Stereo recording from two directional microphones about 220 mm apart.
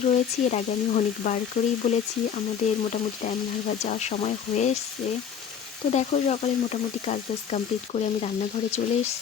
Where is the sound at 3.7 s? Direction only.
30° left (ahead or behind).